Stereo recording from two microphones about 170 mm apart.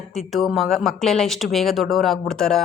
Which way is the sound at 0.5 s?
Centre (ahead or behind).